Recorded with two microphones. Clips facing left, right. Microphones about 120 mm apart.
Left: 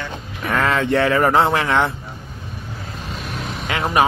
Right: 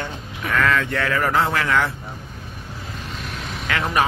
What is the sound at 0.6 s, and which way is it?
Speech, 35° left (ahead or behind).